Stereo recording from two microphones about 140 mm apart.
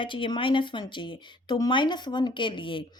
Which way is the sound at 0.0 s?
35° left (ahead or behind).